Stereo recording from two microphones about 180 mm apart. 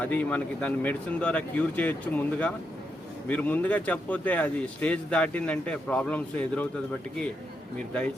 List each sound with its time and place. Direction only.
0.0 s speech: 10° left (ahead or behind)